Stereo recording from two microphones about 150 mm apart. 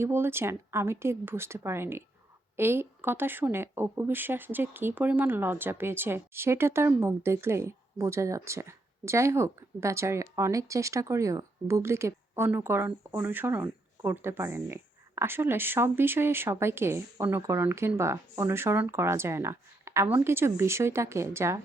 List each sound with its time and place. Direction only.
0.0 s speech: 15° right (ahead or behind)